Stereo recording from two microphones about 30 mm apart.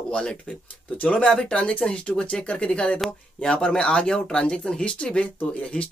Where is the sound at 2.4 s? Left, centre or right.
Left.